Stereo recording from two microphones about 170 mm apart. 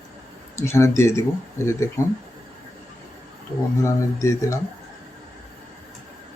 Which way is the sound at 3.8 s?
20° left (ahead or behind).